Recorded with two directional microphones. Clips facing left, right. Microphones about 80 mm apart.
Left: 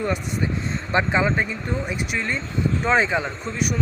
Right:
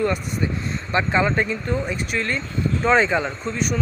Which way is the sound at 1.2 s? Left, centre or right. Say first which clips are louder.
Right 1 dB; centre.